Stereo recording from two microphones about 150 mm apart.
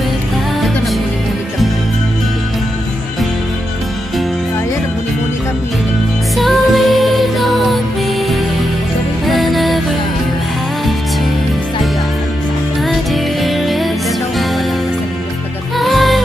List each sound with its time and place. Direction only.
6.3 s music: centre (ahead or behind)
9.2 s music: centre (ahead or behind)
12.8 s music: centre (ahead or behind)
15.8 s music: centre (ahead or behind)